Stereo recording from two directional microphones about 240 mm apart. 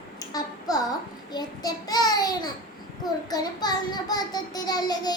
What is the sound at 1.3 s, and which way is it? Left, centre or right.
A child's voice, centre.